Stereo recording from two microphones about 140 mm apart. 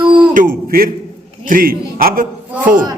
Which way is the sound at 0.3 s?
85° right.